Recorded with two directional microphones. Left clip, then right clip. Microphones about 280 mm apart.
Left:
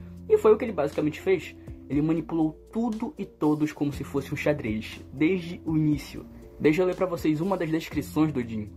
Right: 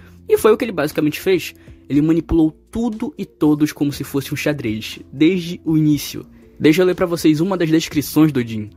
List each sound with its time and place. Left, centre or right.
0.3 s speech: right
3.0 s speech: right